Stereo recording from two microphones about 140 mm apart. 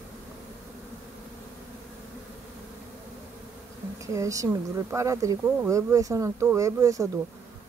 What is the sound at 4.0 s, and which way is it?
Speech, 25° right (ahead or behind).